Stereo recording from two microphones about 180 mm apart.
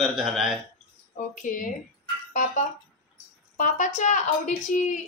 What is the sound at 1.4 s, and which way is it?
Speech, 45° left (ahead or behind).